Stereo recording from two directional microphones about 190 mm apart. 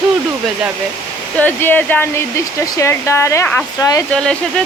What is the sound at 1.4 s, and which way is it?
Speech, 10° left (ahead or behind).